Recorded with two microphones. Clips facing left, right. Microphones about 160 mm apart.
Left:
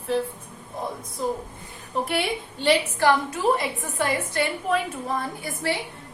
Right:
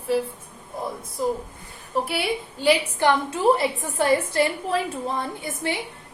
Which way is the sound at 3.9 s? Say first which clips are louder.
Right 5 dB; 30° right (ahead or behind).